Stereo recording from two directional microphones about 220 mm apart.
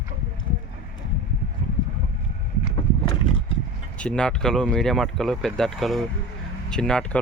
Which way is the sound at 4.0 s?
5° left (ahead or behind).